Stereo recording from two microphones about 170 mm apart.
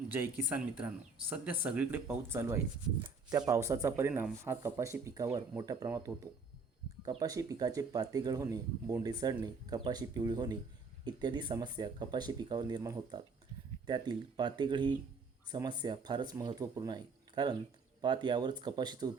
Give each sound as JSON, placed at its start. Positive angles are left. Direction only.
{"t": 0.1, "sound": "speech", "side_deg": -10}